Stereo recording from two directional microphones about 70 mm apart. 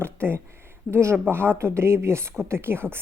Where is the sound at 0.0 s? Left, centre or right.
Right.